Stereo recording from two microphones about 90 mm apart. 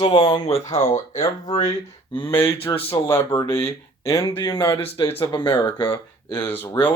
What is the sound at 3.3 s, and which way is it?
Speech, 40° left (ahead or behind).